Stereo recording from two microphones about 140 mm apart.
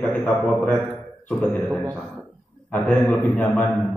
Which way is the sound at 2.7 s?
10° left (ahead or behind).